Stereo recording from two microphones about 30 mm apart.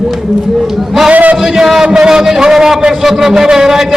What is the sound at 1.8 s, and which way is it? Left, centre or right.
A man's voice, right.